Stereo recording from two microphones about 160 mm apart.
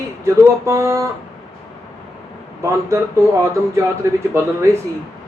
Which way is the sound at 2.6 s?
20° right (ahead or behind).